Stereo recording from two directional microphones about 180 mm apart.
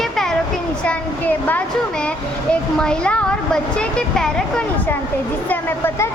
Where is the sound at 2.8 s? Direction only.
5° left (ahead or behind).